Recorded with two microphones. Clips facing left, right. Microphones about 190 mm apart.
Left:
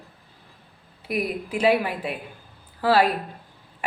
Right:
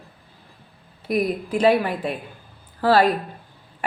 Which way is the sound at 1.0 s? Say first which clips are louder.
Right 5 dB; 40° right (ahead or behind).